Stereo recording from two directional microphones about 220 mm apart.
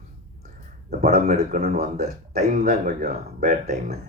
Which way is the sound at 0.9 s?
45° right (ahead or behind).